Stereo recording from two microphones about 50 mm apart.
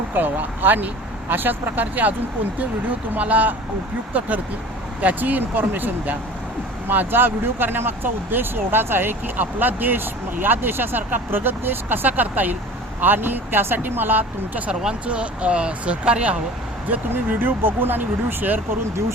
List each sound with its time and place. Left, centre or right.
0.1 s speech: right
3.2 s speech: right
4.9 s speech: right
15.0 s speech: right
17.2 s speech: right